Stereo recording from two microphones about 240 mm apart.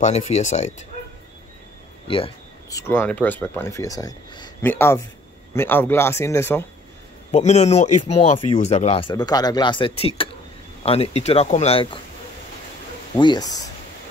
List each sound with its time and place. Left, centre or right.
0.0 s speech: left
2.0 s a sound: left
2.9 s speech: centre
7.2 s speech: left
13.2 s speech: centre